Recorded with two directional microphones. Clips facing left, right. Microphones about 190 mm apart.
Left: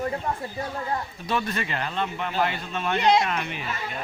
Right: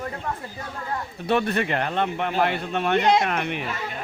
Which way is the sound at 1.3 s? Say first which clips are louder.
Right 6 dB; 60° right (ahead or behind).